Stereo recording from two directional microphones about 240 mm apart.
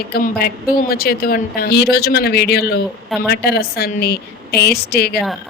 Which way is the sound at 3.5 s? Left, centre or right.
Left.